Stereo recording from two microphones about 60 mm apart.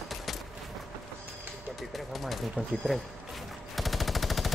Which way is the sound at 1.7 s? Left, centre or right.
Centre.